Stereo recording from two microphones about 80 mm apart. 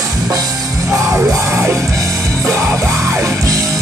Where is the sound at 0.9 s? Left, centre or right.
Right.